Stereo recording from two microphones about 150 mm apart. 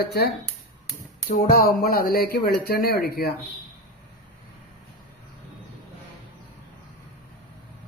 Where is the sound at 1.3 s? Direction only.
70° left (ahead or behind); by 3.3 s 90° left.